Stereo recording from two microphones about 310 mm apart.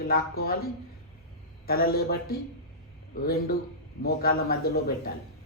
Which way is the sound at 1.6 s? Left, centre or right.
Left.